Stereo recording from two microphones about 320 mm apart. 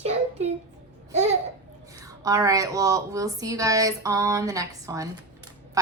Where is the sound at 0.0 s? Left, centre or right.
Centre.